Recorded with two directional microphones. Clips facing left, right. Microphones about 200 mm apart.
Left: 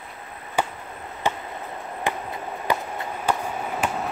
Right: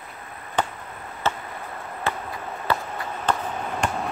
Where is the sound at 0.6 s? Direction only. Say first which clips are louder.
Even; 10° left (ahead or behind).